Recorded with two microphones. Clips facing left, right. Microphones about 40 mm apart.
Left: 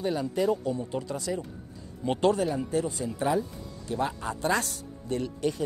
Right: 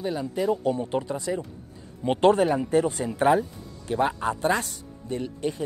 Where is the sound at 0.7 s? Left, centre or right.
Right.